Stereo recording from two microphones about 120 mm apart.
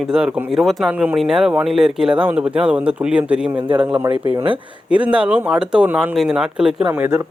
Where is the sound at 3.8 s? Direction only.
15° right (ahead or behind).